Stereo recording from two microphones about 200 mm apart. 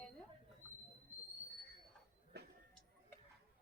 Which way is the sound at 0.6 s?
10° left (ahead or behind).